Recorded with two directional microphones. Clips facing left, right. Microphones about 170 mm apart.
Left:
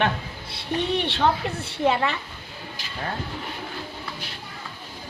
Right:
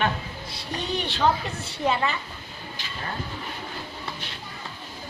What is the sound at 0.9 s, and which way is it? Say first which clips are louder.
A woman's voice: right 1 dB; 60° left (ahead or behind).